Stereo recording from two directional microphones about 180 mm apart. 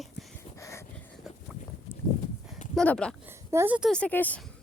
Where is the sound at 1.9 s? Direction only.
15° left (ahead or behind).